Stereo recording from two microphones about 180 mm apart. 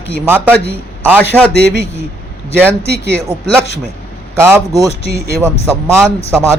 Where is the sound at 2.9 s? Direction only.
65° right (ahead or behind).